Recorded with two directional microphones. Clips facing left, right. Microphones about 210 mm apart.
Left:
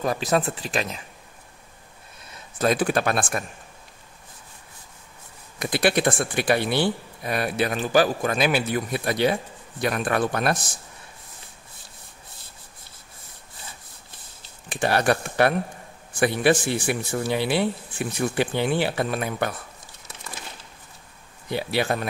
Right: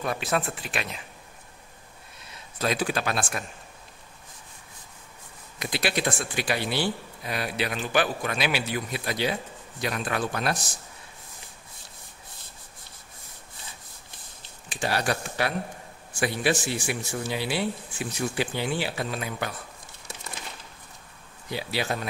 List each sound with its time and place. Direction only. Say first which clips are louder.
0.0 s speech: left 5 dB; 35° left (ahead or behind)
2.6 s speech: left 5 dB; 50° left (ahead or behind)
5.6 s speech: left 6 dB; 55° left (ahead or behind)
14.7 s speech: left 6 dB; 55° left (ahead or behind)
21.5 s speech: left 5 dB; 60° left (ahead or behind)